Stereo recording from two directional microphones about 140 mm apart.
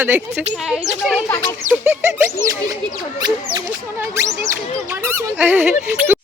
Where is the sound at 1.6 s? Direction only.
15° right (ahead or behind).